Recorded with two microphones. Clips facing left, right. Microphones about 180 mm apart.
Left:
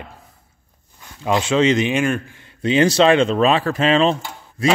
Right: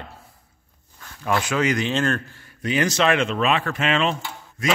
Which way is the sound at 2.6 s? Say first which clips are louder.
Left 6 dB; 30° left (ahead or behind).